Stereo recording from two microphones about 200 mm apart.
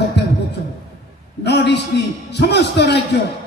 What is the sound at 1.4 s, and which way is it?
A man's voice, 60° left (ahead or behind).